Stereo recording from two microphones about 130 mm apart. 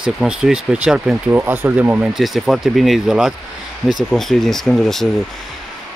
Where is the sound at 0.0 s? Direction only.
5° right (ahead or behind).